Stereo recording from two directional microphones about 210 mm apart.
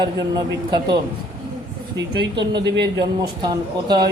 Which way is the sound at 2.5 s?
55° right (ahead or behind).